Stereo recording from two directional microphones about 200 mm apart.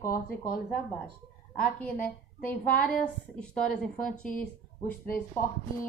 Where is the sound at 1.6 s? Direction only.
5° left (ahead or behind).